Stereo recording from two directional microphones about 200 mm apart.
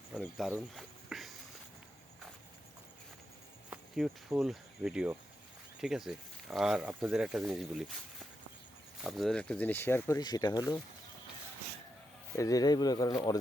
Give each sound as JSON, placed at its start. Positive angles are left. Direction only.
{"t": 0.2, "sound": "speech", "side_deg": 0}
{"t": 0.5, "sound": "a sound", "side_deg": 0}
{"t": 3.7, "sound": "speech", "side_deg": -5}
{"t": 9.0, "sound": "speech", "side_deg": 0}
{"t": 12.4, "sound": "speech", "side_deg": 15}